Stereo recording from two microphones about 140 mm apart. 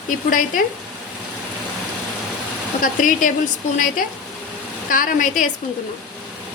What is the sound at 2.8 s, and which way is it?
Speech, 70° left (ahead or behind).